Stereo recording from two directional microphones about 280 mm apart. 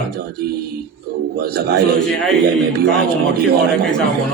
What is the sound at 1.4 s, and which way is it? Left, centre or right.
Speech, right.